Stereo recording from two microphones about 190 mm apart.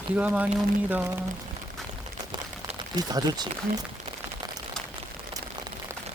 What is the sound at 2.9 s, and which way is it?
Speech, 20° right (ahead or behind).